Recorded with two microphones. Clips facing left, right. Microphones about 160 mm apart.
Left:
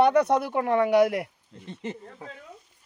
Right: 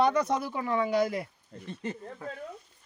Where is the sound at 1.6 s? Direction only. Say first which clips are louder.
Left 1 dB; 20° left (ahead or behind).